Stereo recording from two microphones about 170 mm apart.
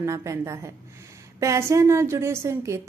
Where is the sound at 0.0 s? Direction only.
15° right (ahead or behind).